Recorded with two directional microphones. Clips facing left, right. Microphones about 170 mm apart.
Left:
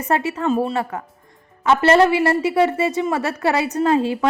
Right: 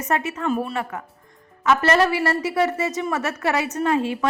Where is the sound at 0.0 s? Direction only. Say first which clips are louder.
Left 3 dB; 30° left (ahead or behind).